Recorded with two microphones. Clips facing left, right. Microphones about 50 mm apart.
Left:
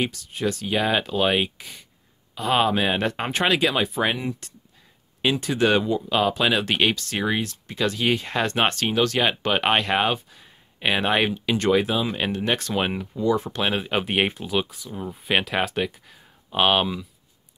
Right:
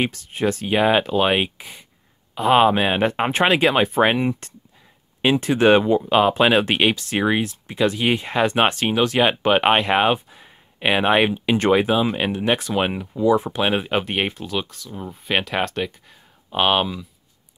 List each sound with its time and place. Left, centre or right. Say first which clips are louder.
0.0 s speech: right 4 dB; right
5.2 s speech: right 5 dB; right
11.5 s speech: right 4 dB; right
13.9 s speech: right 1 dB; centre